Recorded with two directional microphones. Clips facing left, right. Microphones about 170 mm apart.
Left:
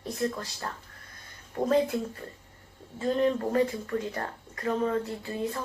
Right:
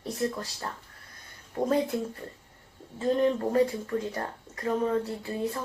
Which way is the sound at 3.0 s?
20° right (ahead or behind).